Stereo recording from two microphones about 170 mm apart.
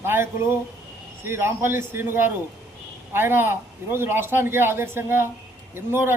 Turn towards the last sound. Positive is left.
turn(degrees=-15)  # may be behind; listen again after turning